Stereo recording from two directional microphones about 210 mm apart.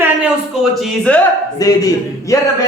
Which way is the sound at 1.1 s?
5° left (ahead or behind).